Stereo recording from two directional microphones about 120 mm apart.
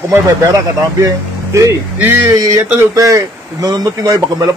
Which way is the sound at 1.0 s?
25° right (ahead or behind).